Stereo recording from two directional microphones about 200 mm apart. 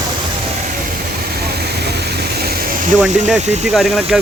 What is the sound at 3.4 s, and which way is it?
Speech, 35° right (ahead or behind).